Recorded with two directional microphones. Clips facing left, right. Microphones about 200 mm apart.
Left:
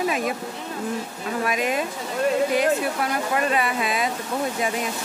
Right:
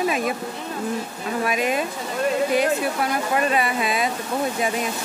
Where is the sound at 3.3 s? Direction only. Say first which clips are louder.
Right 2 dB; 25° right (ahead or behind).